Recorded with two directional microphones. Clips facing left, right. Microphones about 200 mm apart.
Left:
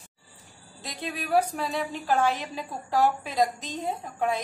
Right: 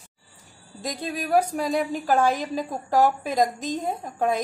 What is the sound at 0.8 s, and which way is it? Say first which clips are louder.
A woman's voice: right 5 dB; 45° right (ahead or behind).